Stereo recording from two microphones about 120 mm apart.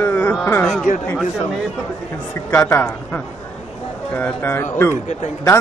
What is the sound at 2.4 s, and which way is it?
Speech, 20° left (ahead or behind).